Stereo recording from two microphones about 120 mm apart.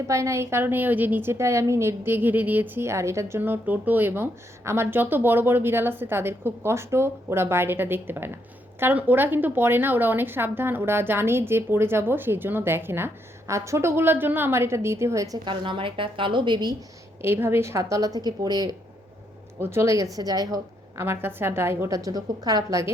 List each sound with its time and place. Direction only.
0.1 s a woman's voice: 25° right (ahead or behind)
15.4 s a woman's voice: 45° right (ahead or behind)
17.2 s a woman's voice: 20° right (ahead or behind)
19.5 s a woman's voice: 20° right (ahead or behind)
21.0 s a woman's voice: 20° right (ahead or behind)